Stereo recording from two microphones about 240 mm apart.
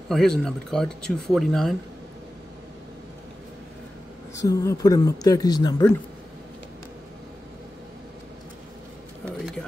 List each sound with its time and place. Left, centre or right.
0.1 s speech: centre
4.4 s speech: centre
9.2 s music: centre